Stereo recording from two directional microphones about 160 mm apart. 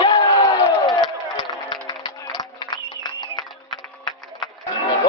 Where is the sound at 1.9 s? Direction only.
30° left (ahead or behind).